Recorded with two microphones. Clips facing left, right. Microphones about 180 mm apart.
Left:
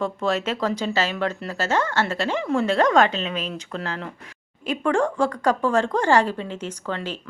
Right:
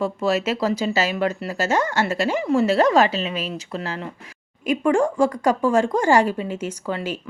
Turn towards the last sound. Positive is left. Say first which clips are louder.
# right 3 dB
turn(degrees=-10)  # may be behind; listen again after turning